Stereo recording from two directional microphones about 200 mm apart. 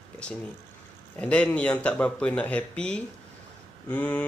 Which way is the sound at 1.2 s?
5° left (ahead or behind).